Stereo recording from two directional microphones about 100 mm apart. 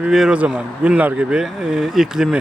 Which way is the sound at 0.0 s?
5° right (ahead or behind).